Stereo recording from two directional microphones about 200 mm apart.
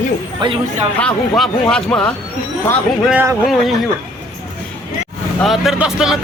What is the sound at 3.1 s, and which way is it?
Speech, 5° right (ahead or behind).